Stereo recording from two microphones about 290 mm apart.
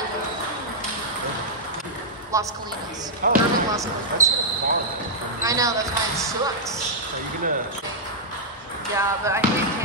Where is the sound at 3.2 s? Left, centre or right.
Right.